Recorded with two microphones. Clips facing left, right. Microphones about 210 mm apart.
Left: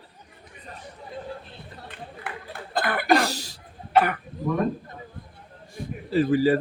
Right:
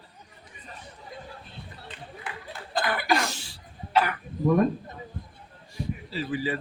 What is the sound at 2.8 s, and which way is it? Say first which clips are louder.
Chuckle: left 4 dB; 55° left (ahead or behind).